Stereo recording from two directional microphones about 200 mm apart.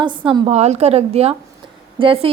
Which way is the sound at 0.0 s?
25° right (ahead or behind).